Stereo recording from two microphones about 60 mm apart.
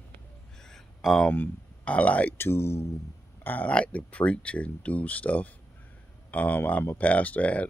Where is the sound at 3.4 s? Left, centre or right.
Left.